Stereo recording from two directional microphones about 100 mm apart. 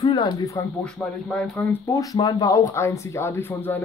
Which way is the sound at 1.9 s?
40° left (ahead or behind).